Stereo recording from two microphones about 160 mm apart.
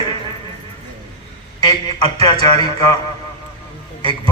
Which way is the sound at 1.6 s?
25° left (ahead or behind).